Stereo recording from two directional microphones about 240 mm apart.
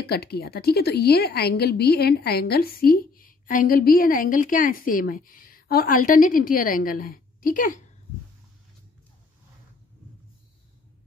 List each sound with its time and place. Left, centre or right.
0.0 s a woman's voice: left